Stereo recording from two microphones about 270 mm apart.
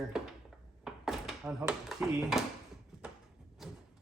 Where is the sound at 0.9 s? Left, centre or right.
Centre.